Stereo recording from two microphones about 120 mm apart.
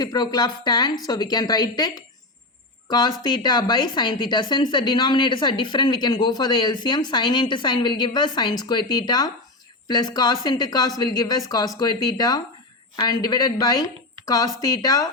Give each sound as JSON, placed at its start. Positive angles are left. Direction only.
{"t": 0.0, "sound": "a woman's voice", "side_deg": 35}